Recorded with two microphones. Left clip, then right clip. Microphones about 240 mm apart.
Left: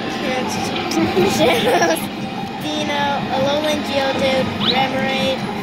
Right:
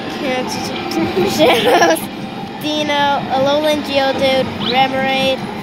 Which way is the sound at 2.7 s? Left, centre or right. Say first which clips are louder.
Right 5 dB; right.